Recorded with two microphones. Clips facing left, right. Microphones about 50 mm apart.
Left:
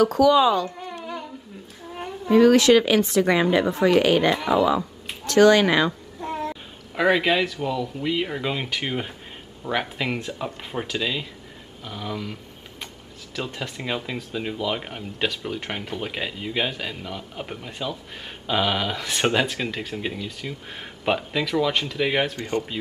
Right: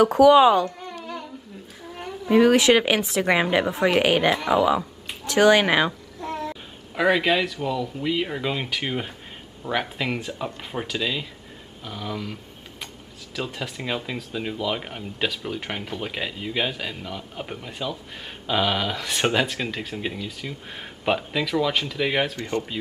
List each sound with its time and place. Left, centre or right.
0.0 s a woman's voice: right
1.0 s humming: centre
2.2 s a woman's voice: centre
6.5 s speech: centre
13.4 s speech: centre